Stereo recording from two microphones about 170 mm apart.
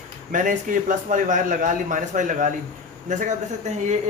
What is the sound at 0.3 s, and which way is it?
A man's voice, 50° right (ahead or behind).